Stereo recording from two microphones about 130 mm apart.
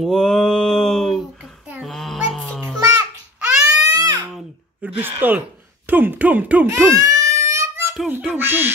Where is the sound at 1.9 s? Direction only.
Centre (ahead or behind).